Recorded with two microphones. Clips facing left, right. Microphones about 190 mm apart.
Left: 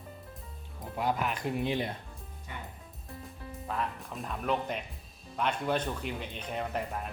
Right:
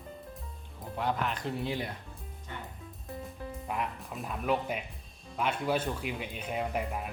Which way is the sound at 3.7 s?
15° right (ahead or behind).